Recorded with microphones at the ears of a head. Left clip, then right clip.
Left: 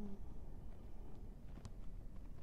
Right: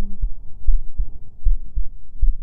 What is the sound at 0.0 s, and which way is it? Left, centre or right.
Heart sounds, right.